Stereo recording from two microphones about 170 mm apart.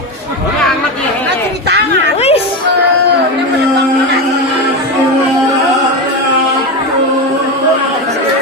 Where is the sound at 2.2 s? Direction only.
35° left (ahead or behind).